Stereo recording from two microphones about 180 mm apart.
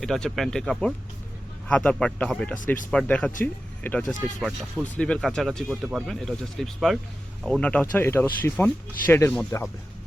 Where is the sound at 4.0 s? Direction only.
45° left (ahead or behind).